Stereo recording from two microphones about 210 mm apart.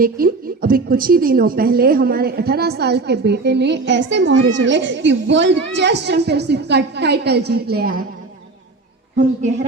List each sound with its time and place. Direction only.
0.0 s a woman's voice: 45° right (ahead or behind)